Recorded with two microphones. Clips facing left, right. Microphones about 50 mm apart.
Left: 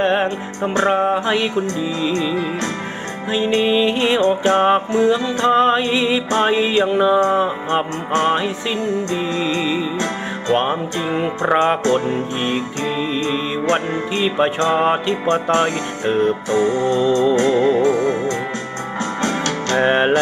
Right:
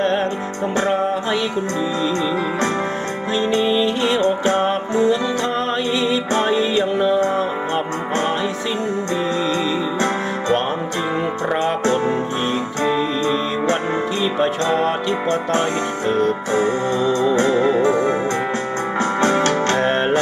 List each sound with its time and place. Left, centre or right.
0.0 s music: left
3.3 s music: left
10.5 s music: left
14.2 s music: left
14.6 s music: left
16.5 s music: right
19.2 s music: right
19.7 s music: left